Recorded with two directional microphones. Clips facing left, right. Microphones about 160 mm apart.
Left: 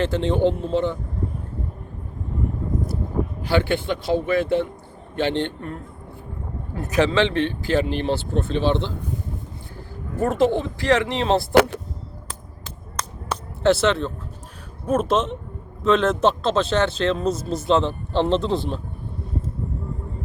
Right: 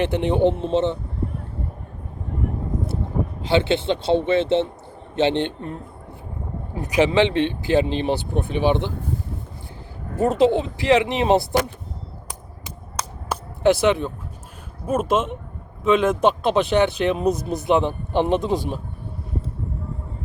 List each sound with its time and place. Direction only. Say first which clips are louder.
0.0 s speech: right 1 dB; 15° right (ahead or behind)
3.4 s speech: right 3 dB; 20° right (ahead or behind)
10.2 s speech: right 2 dB; 20° right (ahead or behind)
11.5 s speech: left 6 dB; 70° left (ahead or behind)
12.3 s a sound: right 1 dB; 10° right (ahead or behind)
14.8 s speech: even; 10° right (ahead or behind)